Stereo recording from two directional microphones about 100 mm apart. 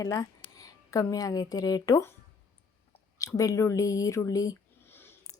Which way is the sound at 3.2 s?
35° left (ahead or behind).